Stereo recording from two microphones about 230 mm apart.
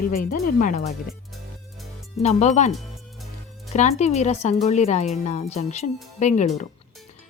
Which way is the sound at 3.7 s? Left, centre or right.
Left.